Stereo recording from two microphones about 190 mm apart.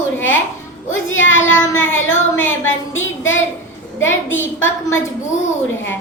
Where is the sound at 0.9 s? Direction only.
90° left.